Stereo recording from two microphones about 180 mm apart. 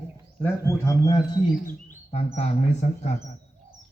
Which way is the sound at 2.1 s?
35° left (ahead or behind).